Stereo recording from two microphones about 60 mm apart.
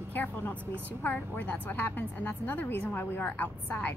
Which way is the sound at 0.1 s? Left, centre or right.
Left.